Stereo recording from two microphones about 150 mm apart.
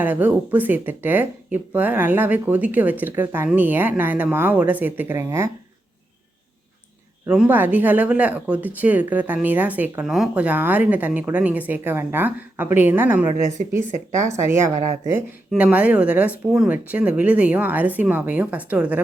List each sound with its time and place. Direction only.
0.0 s speech: 10° right (ahead or behind)
7.3 s speech: 10° right (ahead or behind)
15.5 s speech: 10° right (ahead or behind)